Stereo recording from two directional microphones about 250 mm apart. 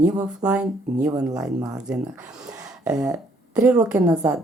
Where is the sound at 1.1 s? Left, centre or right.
Centre.